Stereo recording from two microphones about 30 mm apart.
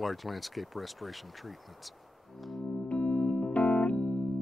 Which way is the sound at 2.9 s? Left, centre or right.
Left.